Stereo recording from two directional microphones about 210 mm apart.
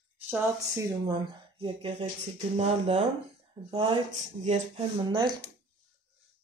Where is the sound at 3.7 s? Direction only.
20° right (ahead or behind).